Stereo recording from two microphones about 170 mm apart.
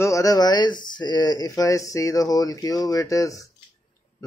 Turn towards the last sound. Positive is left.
turn(degrees=20)  # may be behind; listen again after turning